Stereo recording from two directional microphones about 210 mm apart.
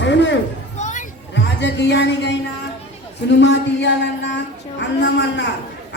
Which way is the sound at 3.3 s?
55° left (ahead or behind).